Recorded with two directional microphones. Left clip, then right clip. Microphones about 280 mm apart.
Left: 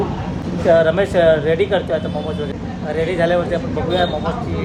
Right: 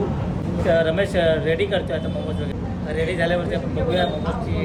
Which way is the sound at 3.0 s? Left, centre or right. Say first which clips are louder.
Left 6 dB; centre.